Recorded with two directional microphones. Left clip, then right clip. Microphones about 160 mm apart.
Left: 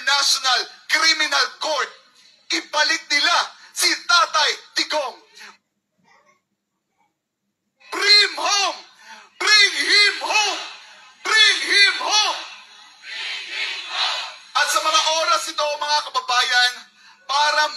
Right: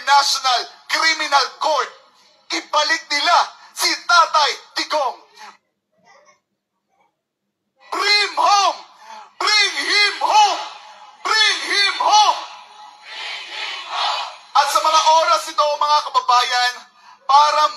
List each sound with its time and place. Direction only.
0.0 s speech: 20° left (ahead or behind)
7.9 s speech: 25° left (ahead or behind)
12.0 s a sound: 25° left (ahead or behind)
17.3 s speech: 20° left (ahead or behind)